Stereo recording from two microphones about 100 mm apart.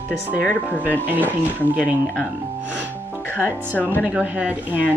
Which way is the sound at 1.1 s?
15° right (ahead or behind).